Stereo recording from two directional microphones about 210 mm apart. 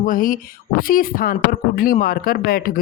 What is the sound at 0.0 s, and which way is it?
Speech, 40° left (ahead or behind).